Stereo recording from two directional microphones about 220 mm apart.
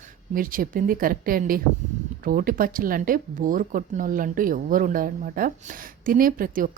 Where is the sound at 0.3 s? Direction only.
40° right (ahead or behind).